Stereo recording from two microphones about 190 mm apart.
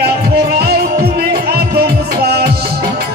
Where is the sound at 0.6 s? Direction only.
55° right (ahead or behind).